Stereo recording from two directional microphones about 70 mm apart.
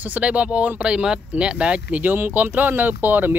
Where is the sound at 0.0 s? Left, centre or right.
Right.